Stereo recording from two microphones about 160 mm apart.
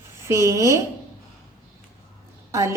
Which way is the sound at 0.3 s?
15° right (ahead or behind).